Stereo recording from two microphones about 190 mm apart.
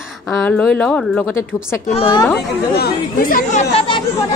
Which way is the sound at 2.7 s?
50° left (ahead or behind).